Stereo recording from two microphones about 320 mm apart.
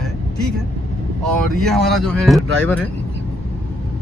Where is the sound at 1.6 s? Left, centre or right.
Centre.